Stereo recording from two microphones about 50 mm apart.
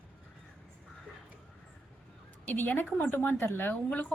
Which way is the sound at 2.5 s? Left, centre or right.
Left.